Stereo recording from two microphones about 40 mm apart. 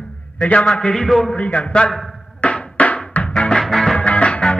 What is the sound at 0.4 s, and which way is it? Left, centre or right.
Speech, left.